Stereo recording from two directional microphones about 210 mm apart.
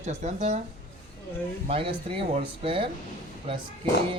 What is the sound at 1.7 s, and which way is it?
Speech, 25° right (ahead or behind).